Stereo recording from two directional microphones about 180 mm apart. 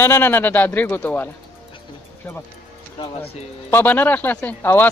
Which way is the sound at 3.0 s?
30° left (ahead or behind).